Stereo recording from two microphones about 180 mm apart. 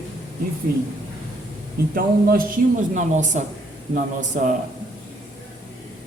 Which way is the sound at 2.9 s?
40° right (ahead or behind).